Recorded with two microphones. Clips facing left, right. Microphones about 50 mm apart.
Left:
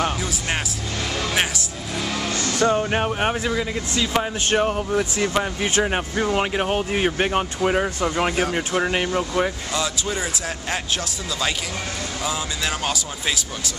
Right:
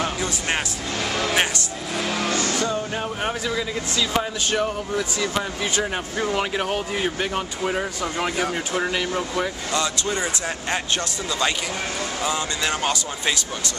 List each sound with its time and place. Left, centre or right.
1.3 s music: centre
2.0 s music: right
2.6 s music: left
3.2 s speech: left
4.5 s speech: left
6.3 s speech: centre
7.2 s speech: left
9.7 s speech: centre
12.2 s speech: centre